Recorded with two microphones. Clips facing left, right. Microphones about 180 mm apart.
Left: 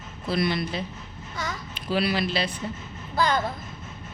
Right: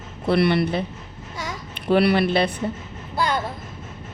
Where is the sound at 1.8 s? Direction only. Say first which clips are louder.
Right 8 dB; 60° right (ahead or behind).